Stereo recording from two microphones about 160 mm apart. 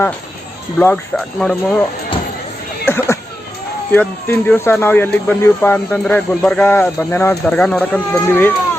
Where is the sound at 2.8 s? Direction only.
15° left (ahead or behind).